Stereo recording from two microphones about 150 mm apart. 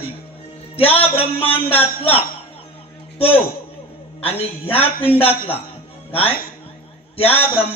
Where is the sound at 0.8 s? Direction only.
40° left (ahead or behind).